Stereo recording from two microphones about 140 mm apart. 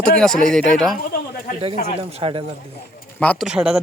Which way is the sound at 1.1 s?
90° left.